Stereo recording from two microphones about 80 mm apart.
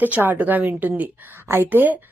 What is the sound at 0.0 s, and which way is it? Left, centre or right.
A woman's voice, right.